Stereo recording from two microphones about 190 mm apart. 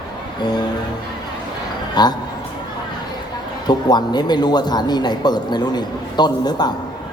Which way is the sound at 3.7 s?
20° left (ahead or behind).